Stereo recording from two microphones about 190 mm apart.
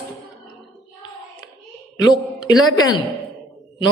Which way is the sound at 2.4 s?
20° left (ahead or behind).